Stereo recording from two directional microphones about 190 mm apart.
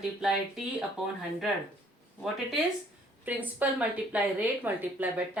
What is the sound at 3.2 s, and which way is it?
A woman's voice, 10° right (ahead or behind).